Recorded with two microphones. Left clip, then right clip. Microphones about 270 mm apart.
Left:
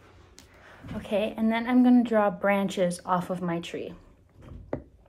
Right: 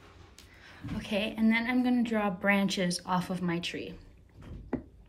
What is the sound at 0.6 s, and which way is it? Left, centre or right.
A woman's voice, centre.